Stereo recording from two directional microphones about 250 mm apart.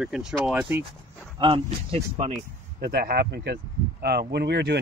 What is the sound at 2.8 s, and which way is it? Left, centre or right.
Speech, right.